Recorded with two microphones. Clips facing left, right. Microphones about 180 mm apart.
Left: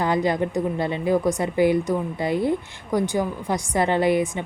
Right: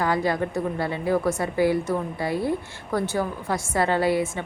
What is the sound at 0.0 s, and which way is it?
A woman's voice, 20° left (ahead or behind).